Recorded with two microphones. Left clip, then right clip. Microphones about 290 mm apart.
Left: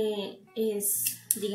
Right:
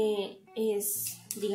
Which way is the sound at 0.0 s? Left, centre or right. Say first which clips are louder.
Right 1 dB; right.